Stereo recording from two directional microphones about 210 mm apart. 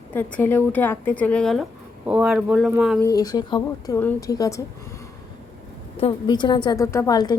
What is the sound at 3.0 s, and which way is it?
A woman's voice, 15° left (ahead or behind).